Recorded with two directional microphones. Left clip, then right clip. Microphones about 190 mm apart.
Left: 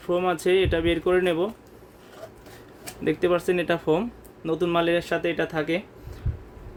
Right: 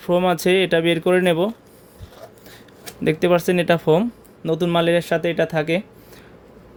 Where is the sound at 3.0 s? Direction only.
40° right (ahead or behind).